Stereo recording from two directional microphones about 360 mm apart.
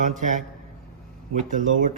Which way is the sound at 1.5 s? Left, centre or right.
Right.